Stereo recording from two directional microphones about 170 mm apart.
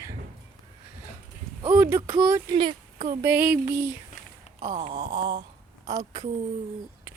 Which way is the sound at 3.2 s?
10° right (ahead or behind).